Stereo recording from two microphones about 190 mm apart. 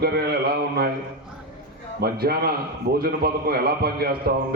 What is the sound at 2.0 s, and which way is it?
A man's voice, 55° right (ahead or behind).